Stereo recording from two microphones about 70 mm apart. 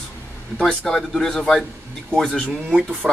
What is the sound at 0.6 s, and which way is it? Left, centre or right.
Speech, centre.